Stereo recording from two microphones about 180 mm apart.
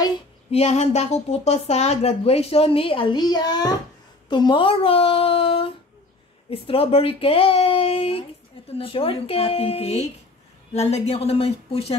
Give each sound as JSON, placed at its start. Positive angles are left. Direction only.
{"t": 0.5, "sound": "speech", "side_deg": 35}